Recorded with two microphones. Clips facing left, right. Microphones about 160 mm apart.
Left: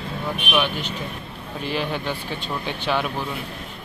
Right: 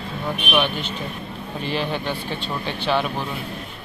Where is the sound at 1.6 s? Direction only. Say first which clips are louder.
Right 1 dB; 10° left (ahead or behind).